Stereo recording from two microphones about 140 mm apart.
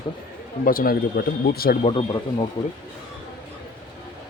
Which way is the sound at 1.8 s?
40° left (ahead or behind).